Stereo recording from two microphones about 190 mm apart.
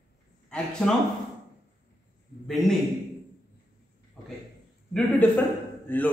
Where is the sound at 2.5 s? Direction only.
Centre (ahead or behind).